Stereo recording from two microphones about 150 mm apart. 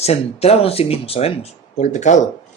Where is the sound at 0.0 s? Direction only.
45° left (ahead or behind).